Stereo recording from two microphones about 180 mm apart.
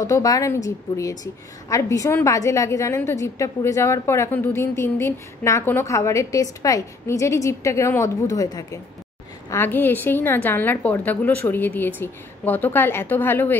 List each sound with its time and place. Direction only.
0.0 s a woman's voice: 20° left (ahead or behind)